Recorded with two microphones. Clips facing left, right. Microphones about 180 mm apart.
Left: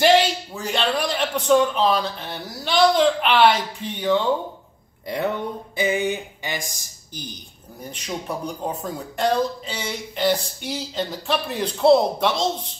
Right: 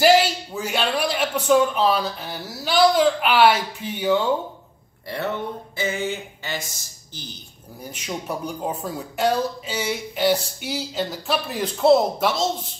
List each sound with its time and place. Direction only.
0.0 s a man's voice: 5° right (ahead or behind)
5.0 s speech: 15° left (ahead or behind)
7.9 s speech: 5° right (ahead or behind)